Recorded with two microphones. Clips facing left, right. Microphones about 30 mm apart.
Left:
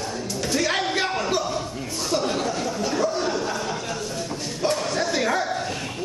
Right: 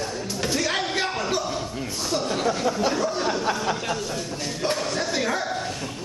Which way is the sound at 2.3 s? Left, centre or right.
Centre.